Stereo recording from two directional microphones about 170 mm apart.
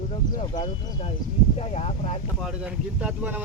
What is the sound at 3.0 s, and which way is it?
Speech, 10° right (ahead or behind).